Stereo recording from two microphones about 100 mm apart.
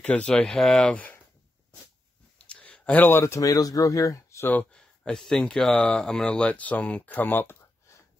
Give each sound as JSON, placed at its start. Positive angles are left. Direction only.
{"t": 0.0, "sound": "speech", "side_deg": 10}
{"t": 2.5, "sound": "speech", "side_deg": 15}
{"t": 4.5, "sound": "speech", "side_deg": 10}